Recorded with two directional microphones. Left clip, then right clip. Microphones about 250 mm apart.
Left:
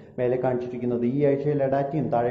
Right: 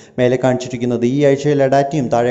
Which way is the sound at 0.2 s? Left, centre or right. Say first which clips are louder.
Right 9 dB; right.